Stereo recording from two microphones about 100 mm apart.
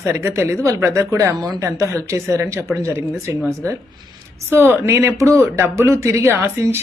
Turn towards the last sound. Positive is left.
turn(degrees=-25)  # may be behind; listen again after turning